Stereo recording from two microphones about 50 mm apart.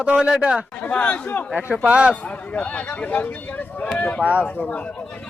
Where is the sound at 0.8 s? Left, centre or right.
Left.